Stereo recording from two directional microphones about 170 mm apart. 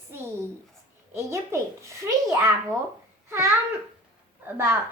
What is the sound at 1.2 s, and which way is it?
A child's voice, 15° right (ahead or behind).